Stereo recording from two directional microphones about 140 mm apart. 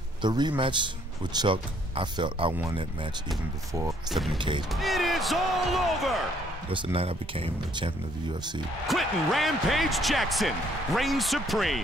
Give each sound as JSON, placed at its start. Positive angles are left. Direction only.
{"t": 0.2, "sound": "speech", "side_deg": -30}
{"t": 4.1, "sound": "speech", "side_deg": 0}
{"t": 4.4, "sound": "speech", "side_deg": -35}
{"t": 4.6, "sound": "speech", "side_deg": 0}
{"t": 6.7, "sound": "speech", "side_deg": -40}
{"t": 8.8, "sound": "speech", "side_deg": 0}